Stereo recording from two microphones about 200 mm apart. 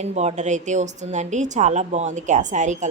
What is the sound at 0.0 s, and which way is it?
A woman's voice, 35° right (ahead or behind).